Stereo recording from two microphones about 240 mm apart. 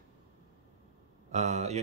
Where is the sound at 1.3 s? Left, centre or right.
Right.